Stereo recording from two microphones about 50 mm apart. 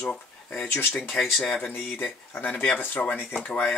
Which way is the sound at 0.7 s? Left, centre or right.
Left.